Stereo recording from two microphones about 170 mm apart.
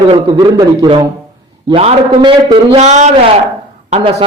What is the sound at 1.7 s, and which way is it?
A man's voice, 35° right (ahead or behind).